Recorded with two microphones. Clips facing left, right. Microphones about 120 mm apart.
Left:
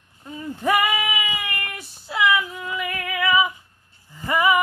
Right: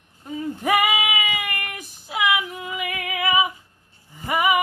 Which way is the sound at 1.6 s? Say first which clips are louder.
Even; 20° right (ahead or behind).